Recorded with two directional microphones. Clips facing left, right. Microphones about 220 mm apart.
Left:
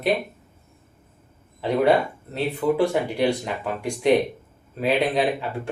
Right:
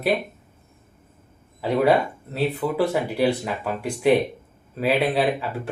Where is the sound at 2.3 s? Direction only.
5° right (ahead or behind).